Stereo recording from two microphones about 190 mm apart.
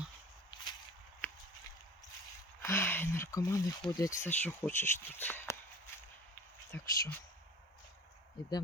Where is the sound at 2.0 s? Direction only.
20° left (ahead or behind).